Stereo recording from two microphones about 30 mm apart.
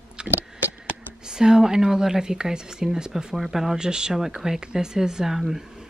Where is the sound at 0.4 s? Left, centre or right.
Right.